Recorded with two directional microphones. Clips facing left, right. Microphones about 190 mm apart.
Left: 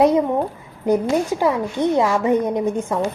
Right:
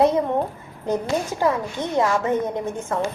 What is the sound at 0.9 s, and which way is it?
A woman's voice, 15° left (ahead or behind).